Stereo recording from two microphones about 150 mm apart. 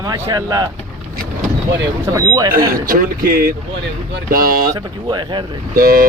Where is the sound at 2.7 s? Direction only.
70° right (ahead or behind).